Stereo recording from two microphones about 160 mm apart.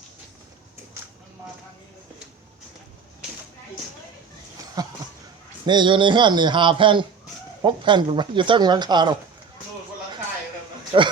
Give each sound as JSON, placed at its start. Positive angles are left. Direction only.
{"t": 4.8, "sound": "a sound", "side_deg": -25}
{"t": 5.6, "sound": "speech", "side_deg": -30}
{"t": 10.9, "sound": "a man's voice", "side_deg": -35}